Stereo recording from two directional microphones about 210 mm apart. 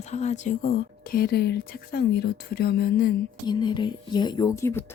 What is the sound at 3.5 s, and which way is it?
Speech, 20° left (ahead or behind).